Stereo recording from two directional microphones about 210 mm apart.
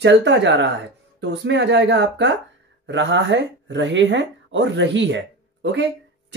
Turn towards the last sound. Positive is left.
turn(degrees=-55)  # may be behind; listen again after turning